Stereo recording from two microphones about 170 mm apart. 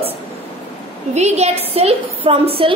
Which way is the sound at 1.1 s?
40° right (ahead or behind).